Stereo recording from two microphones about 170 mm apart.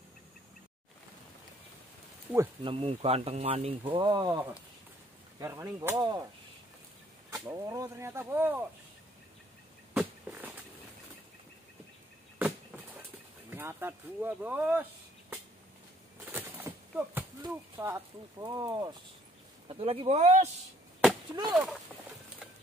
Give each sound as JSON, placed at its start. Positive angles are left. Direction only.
{"t": 2.6, "sound": "speech", "side_deg": -35}
{"t": 5.4, "sound": "speech", "side_deg": -20}
{"t": 7.2, "sound": "speech", "side_deg": -20}
{"t": 9.9, "sound": "a sound", "side_deg": -10}
{"t": 12.4, "sound": "a sound", "side_deg": -10}
{"t": 13.5, "sound": "speech", "side_deg": -10}
{"t": 16.3, "sound": "a sound", "side_deg": -10}
{"t": 17.4, "sound": "speech", "side_deg": -15}
{"t": 19.7, "sound": "speech", "side_deg": -35}
{"t": 21.5, "sound": "speech", "side_deg": 0}